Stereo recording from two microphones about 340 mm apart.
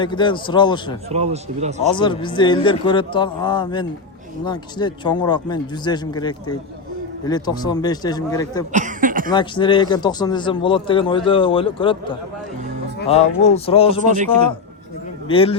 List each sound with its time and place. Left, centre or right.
0.0 s speech: centre
1.1 s speech: centre
1.9 s speech: centre
8.7 s a sound: right
9.3 s speech: centre
15.3 s speech: centre